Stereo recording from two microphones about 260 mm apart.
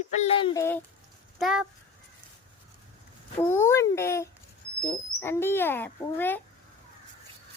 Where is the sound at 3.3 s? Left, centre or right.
Centre.